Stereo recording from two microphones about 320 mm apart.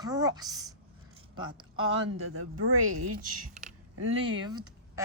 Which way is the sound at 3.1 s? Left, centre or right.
Right.